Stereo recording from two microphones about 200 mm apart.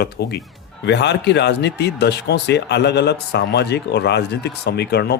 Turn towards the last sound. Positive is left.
turn(degrees=55)  # may be behind; listen again after turning